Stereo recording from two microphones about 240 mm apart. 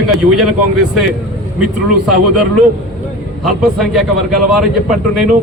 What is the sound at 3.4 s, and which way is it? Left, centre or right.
A man's voice, centre.